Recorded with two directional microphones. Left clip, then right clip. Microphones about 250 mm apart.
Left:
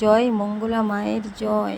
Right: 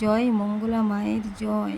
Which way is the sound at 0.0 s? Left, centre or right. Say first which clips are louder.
Left 6 dB; centre.